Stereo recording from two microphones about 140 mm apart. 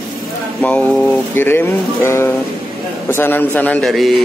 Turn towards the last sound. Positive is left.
turn(degrees=0)  # may be behind; listen again after turning